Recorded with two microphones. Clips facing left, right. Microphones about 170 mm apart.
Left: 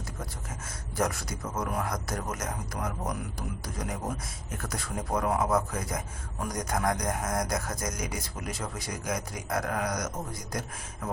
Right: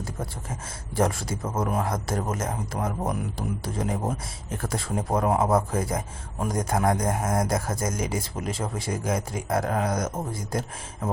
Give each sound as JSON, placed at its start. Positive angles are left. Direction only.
{"t": 0.9, "sound": "speech", "side_deg": -25}